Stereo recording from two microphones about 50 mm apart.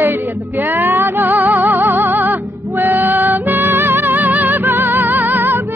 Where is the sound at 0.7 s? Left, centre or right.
Right.